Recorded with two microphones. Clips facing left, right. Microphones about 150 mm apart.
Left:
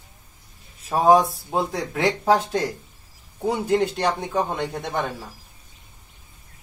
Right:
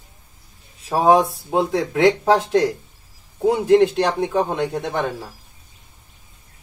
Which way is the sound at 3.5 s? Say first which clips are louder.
Right 7 dB; centre (ahead or behind).